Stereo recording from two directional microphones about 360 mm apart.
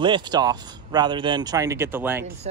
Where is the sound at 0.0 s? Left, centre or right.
Centre.